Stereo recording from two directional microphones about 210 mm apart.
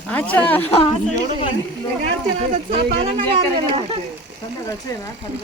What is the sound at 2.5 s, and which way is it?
Speech, 45° right (ahead or behind).